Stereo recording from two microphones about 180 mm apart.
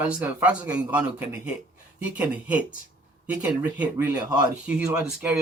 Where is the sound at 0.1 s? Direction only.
10° right (ahead or behind).